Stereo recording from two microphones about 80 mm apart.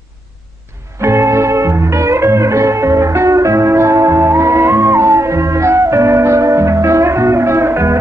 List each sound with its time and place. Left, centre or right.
1.0 s music: right